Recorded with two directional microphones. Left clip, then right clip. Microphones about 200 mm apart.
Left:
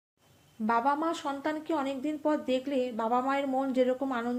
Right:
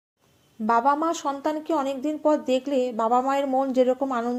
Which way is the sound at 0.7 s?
20° right (ahead or behind).